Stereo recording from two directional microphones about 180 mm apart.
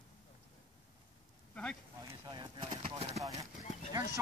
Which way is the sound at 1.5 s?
5° left (ahead or behind).